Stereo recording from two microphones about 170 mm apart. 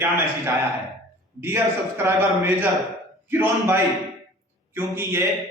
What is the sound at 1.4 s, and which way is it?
A man's voice, 15° right (ahead or behind).